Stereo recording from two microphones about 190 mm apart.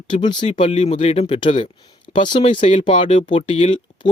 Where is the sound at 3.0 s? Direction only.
40° left (ahead or behind).